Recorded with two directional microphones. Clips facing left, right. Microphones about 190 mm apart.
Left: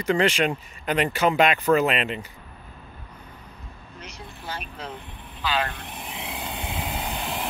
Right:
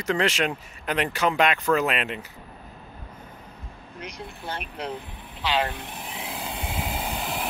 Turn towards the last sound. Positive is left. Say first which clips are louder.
# even
turn(degrees=0)  # may be behind; listen again after turning